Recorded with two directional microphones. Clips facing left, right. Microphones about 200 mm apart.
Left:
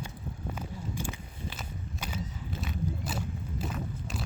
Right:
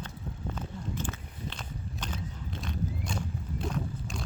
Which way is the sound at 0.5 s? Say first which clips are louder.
Right 1 dB; 10° left (ahead or behind).